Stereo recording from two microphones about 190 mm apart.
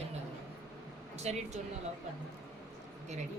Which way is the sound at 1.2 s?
35° right (ahead or behind).